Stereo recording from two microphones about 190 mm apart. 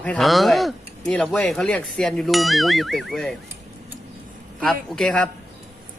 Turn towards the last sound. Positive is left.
turn(degrees=5)  # may be behind; listen again after turning